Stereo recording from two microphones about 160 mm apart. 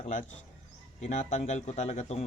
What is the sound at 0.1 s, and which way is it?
Speech, 55° left (ahead or behind).